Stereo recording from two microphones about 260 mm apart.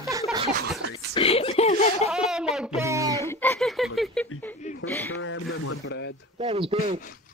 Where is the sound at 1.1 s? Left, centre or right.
Left.